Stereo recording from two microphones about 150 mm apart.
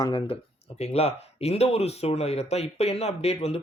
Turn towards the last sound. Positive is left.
turn(degrees=45)  # may be behind; listen again after turning